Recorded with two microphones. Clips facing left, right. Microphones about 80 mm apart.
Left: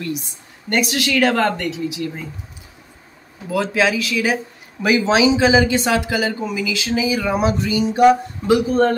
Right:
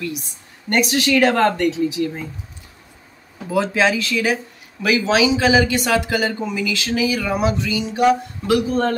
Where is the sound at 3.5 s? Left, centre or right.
Centre.